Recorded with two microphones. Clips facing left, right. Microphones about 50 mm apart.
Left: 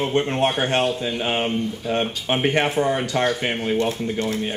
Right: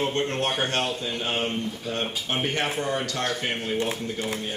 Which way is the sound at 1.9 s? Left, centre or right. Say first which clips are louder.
Left 9 dB; centre.